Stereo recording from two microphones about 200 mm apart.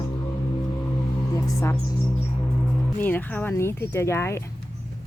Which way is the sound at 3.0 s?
10° left (ahead or behind).